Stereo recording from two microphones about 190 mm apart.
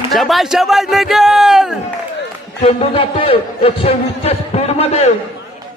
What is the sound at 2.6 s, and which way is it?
A man's voice, 30° left (ahead or behind).